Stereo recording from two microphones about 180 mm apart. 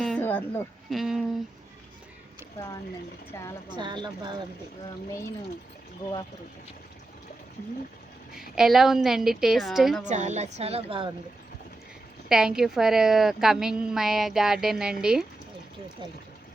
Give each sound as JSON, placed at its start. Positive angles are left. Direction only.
{"t": 0.0, "sound": "a sound", "side_deg": 5}
{"t": 0.9, "sound": "a woman's voice", "side_deg": 0}
{"t": 3.7, "sound": "speech", "side_deg": -25}
{"t": 6.0, "sound": "speech", "side_deg": 50}
{"t": 8.4, "sound": "a woman's voice", "side_deg": 0}
{"t": 10.0, "sound": "a woman's voice", "side_deg": -40}
{"t": 12.3, "sound": "a woman's voice", "side_deg": -5}